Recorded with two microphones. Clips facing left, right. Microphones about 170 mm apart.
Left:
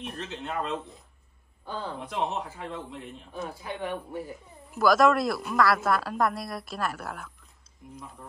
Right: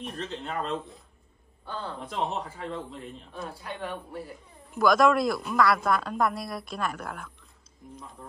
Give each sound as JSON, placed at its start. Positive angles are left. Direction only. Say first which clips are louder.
{"t": 0.0, "sound": "speech", "louder": "right 1 dB", "side_deg": 5}
{"t": 1.7, "sound": "speech", "louder": "left 1 dB", "side_deg": 15}
{"t": 2.0, "sound": "speech", "louder": "even", "side_deg": 5}
{"t": 3.3, "sound": "speech", "louder": "left 3 dB", "side_deg": 20}
{"t": 4.6, "sound": "speech", "louder": "even", "side_deg": 0}